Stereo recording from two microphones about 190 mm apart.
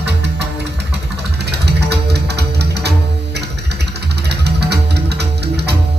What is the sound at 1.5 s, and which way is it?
Music, 60° right (ahead or behind).